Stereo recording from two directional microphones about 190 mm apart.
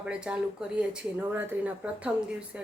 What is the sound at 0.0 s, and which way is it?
A woman's voice, 5° right (ahead or behind).